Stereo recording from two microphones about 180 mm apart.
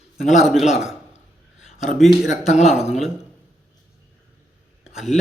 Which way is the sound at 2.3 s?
40° left (ahead or behind).